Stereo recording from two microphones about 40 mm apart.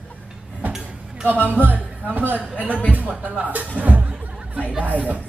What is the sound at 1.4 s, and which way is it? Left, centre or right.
Speech, left.